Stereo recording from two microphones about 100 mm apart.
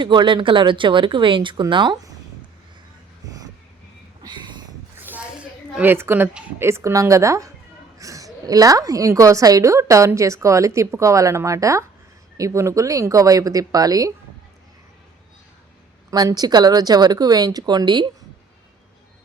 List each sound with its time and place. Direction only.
0.0 s speech: 50° right (ahead or behind)
3.2 s vehicle: 40° right (ahead or behind)
4.3 s a sound: 50° right (ahead or behind)
5.0 s a sound: 15° right (ahead or behind)
5.9 s a woman's voice: 20° right (ahead or behind); by 14.1 s 40° right (ahead or behind)
16.0 s speech: 40° right (ahead or behind)